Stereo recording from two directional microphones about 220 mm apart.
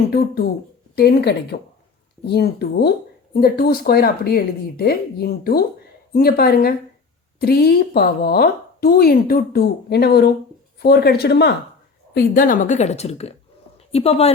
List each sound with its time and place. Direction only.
0.9 s a woman's voice: 45° left (ahead or behind); by 14.3 s 25° left (ahead or behind)